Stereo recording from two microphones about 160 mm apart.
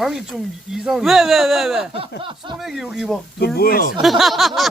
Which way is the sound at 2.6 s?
Centre (ahead or behind).